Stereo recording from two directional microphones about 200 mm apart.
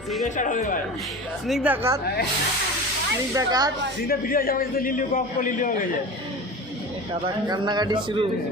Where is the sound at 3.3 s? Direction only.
20° right (ahead or behind).